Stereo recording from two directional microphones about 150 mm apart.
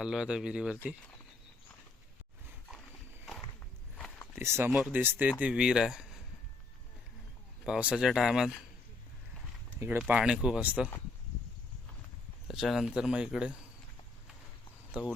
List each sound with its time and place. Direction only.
0.0 s speech: 5° right (ahead or behind)
4.4 s speech: 15° right (ahead or behind)
7.6 s speech: 5° right (ahead or behind)
10.1 s speech: 10° right (ahead or behind)
12.5 s speech: centre (ahead or behind)
14.9 s speech: 10° right (ahead or behind)